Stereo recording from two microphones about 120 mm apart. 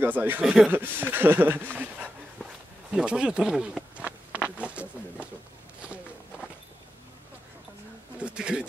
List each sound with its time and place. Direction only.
0.0 s speech: 15° right (ahead or behind)
2.9 s a sound: 5° right (ahead or behind)
8.2 s pigeon: 10° right (ahead or behind)